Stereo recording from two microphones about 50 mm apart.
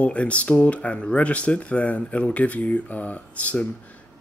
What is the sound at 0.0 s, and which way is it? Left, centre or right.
Speech, left.